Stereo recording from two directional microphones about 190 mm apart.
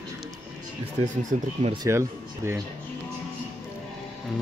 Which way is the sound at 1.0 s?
40° right (ahead or behind).